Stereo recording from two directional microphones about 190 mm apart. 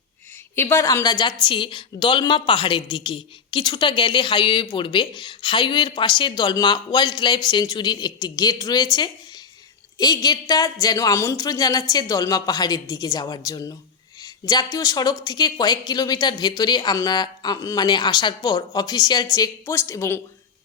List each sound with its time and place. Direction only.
0.5 s a woman's voice: 15° left (ahead or behind)